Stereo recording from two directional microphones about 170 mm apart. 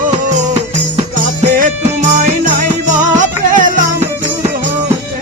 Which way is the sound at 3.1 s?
50° right (ahead or behind).